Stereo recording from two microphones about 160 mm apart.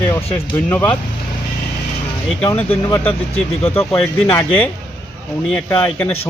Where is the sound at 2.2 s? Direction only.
10° left (ahead or behind).